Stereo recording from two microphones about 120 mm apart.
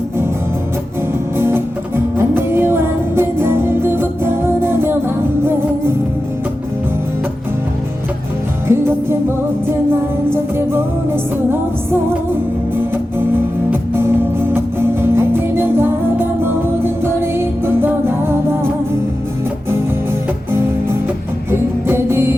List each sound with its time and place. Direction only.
1.4 s music: 20° right (ahead or behind)
8.6 s music: 20° right (ahead or behind)
21.5 s music: 20° right (ahead or behind)